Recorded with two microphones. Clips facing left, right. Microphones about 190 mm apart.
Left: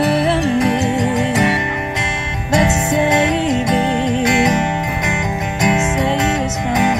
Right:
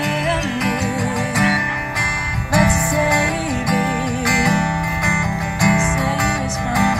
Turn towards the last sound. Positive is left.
turn(degrees=20)  # may be behind; listen again after turning